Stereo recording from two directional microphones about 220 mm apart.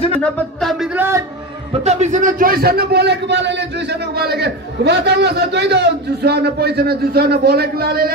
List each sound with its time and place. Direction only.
0.2 s speech: centre (ahead or behind)
1.7 s a man's voice: 30° right (ahead or behind)